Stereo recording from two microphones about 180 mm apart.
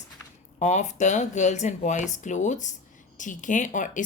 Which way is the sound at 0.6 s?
40° left (ahead or behind).